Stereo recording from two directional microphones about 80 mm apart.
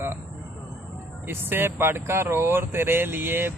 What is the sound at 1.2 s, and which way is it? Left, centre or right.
A man's voice, right.